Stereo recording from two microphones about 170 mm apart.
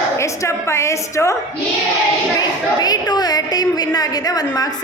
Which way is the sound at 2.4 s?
25° left (ahead or behind).